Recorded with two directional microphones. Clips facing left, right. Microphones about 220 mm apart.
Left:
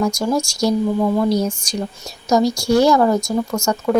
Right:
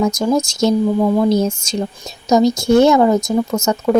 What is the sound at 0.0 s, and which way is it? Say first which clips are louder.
Speech: right 3 dB; 20° right (ahead or behind).